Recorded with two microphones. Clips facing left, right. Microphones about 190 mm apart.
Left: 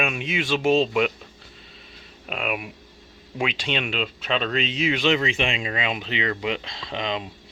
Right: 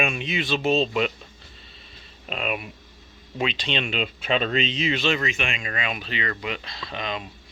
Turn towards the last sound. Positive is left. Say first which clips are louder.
# left 3 dB
turn(degrees=20)  # may be behind; listen again after turning